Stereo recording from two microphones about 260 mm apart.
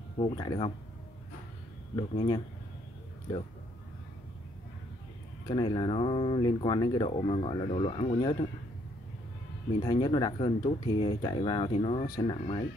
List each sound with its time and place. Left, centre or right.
0.2 s speech: centre
2.0 s speech: centre
5.5 s speech: centre
9.8 s speech: centre